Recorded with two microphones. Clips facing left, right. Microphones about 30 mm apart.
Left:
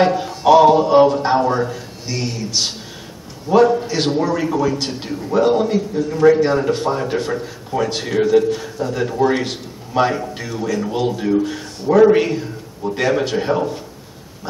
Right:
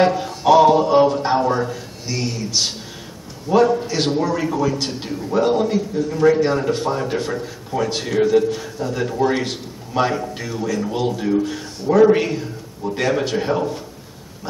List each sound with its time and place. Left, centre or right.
0.0 s a man's voice: centre